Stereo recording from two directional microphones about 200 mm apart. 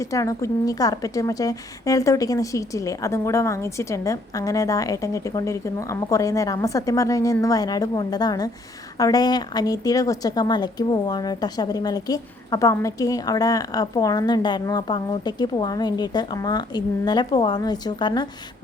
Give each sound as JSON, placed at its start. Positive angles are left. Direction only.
{"t": 0.0, "sound": "a woman's voice", "side_deg": 15}